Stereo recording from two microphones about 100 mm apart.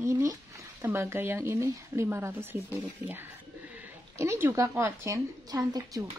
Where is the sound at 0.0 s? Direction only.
30° right (ahead or behind).